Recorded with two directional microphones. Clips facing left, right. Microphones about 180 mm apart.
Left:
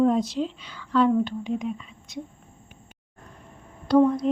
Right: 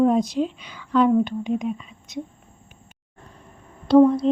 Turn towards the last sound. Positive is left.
turn(degrees=-30)  # may be behind; listen again after turning